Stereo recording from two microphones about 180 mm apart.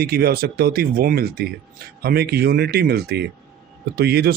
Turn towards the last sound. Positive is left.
turn(degrees=-60)  # may be behind; listen again after turning